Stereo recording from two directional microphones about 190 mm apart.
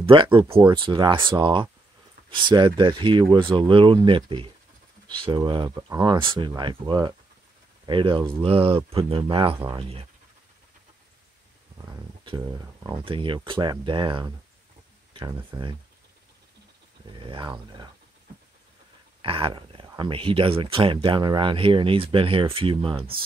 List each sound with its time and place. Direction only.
0.0 s speech: 25° right (ahead or behind)
11.8 s a sound: 15° right (ahead or behind)
12.8 s speech: 25° right (ahead or behind)
15.3 s speech: 20° right (ahead or behind)
17.1 s speech: 25° right (ahead or behind)
19.2 s speech: 30° right (ahead or behind)